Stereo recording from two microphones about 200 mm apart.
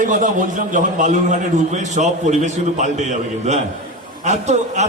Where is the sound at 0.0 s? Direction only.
40° right (ahead or behind).